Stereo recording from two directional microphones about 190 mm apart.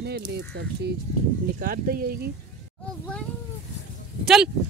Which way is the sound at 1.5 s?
45° right (ahead or behind).